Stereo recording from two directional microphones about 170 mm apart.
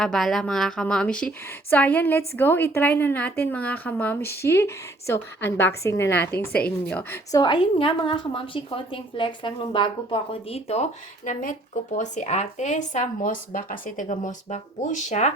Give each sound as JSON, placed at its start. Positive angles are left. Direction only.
{"t": 0.0, "sound": "a woman's voice", "side_deg": 5}
{"t": 11.3, "sound": "speech", "side_deg": 50}